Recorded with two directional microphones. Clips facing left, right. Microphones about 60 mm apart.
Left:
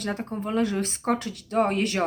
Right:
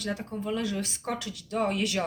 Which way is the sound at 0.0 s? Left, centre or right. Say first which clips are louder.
Left 3 dB; left.